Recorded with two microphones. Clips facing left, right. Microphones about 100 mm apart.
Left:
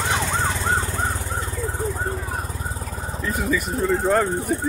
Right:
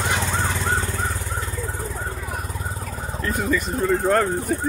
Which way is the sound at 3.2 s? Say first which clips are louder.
Right 1 dB; centre (ahead or behind).